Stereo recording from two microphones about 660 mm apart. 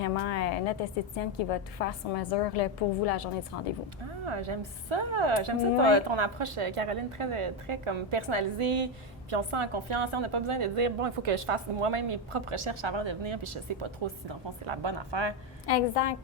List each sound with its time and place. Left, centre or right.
0.0 s a woman's voice: left
4.3 s a woman's voice: right
15.6 s a woman's voice: left